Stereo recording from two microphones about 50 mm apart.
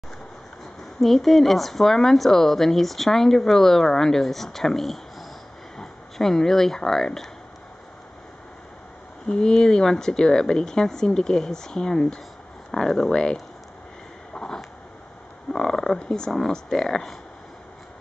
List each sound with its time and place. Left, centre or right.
1.0 s speech: centre
9.3 s speech: centre
14.3 s a sound: centre
15.5 s speech: centre